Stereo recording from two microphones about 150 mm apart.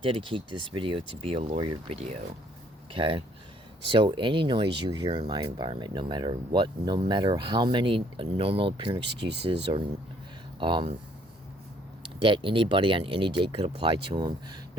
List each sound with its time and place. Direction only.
0.0 s speech: 35° right (ahead or behind)
12.2 s speech: 35° right (ahead or behind)